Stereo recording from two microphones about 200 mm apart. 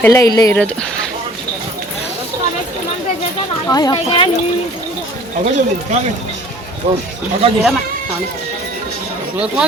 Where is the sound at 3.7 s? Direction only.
20° left (ahead or behind).